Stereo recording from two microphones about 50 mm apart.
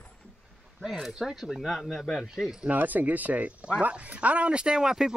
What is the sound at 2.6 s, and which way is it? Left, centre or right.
Speech, right.